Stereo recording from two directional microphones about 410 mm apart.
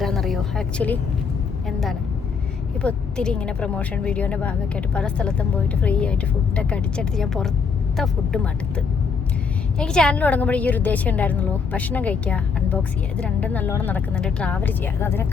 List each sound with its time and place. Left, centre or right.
0.0 s a woman's voice: centre